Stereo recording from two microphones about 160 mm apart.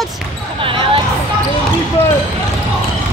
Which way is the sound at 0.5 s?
35° right (ahead or behind).